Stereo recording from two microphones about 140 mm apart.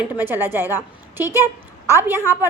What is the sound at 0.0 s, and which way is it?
A woman's voice, 15° right (ahead or behind).